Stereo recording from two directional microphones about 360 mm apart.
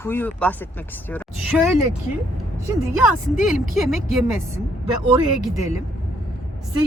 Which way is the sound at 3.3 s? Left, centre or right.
Centre.